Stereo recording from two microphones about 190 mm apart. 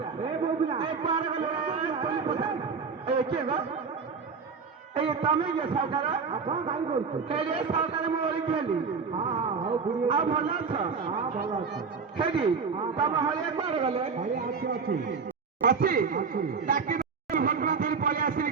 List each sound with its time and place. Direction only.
0.7 s a man's voice: 30° right (ahead or behind)
4.9 s a man's voice: 25° right (ahead or behind)
9.6 s a man's voice: 25° right (ahead or behind)
14.3 s a man's voice: 50° right (ahead or behind)